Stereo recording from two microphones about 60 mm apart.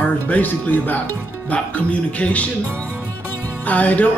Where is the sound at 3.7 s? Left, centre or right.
Left.